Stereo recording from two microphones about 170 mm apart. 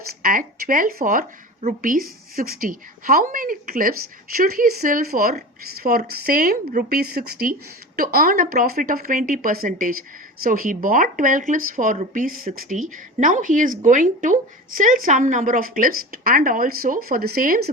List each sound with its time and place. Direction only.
0.1 s speech: 55° right (ahead or behind)